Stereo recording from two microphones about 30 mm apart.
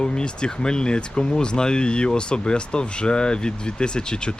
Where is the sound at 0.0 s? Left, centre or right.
Left.